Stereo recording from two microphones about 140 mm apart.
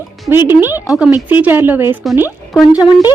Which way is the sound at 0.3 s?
15° right (ahead or behind).